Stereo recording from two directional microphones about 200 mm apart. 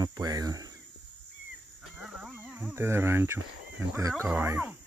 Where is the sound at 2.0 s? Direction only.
5° right (ahead or behind).